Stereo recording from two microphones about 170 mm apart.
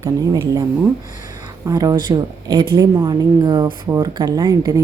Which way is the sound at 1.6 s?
20° right (ahead or behind).